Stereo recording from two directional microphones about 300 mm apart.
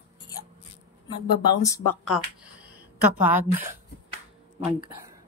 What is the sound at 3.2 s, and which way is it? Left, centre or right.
Speech, centre.